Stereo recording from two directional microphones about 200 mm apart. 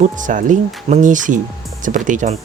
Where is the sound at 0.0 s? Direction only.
40° right (ahead or behind).